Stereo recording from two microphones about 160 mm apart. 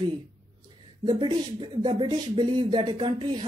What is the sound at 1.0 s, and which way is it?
Speech, 30° right (ahead or behind).